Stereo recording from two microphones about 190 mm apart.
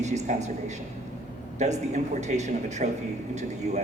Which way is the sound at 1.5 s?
35° right (ahead or behind).